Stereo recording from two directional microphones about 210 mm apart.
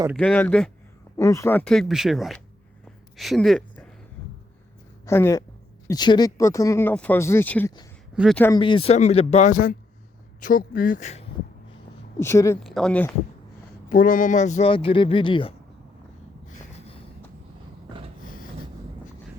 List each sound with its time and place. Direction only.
0.2 s speech: 5° left (ahead or behind)
5.0 s speech: 15° left (ahead or behind)
8.1 s speech: 5° right (ahead or behind)
8.5 s speech: 25° left (ahead or behind)
12.2 s speech: 15° left (ahead or behind)
12.6 s speech: centre (ahead or behind)
13.9 s speech: 40° left (ahead or behind); by 15.5 s 25° left (ahead or behind)
16.7 s a sound: 30° left (ahead or behind)